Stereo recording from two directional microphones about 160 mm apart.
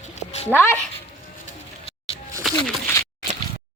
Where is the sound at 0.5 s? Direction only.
10° left (ahead or behind).